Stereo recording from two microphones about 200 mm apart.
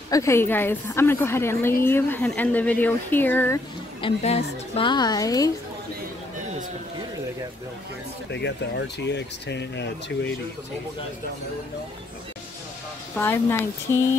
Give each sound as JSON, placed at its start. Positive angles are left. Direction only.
{"t": 0.1, "sound": "speech", "side_deg": 15}
{"t": 4.0, "sound": "a woman's voice", "side_deg": 30}
{"t": 8.3, "sound": "speech", "side_deg": 60}
{"t": 13.1, "sound": "speech", "side_deg": 10}